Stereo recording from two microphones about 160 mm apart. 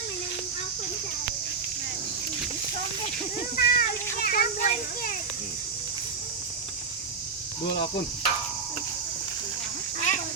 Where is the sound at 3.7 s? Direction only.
65° left (ahead or behind).